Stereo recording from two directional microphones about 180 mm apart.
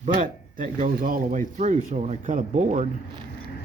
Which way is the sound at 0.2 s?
45° right (ahead or behind).